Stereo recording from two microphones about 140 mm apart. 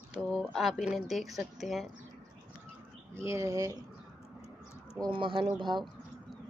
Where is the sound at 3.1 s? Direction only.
20° right (ahead or behind).